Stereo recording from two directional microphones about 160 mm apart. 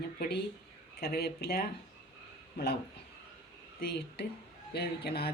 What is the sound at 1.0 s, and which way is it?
Speech, 75° left (ahead or behind).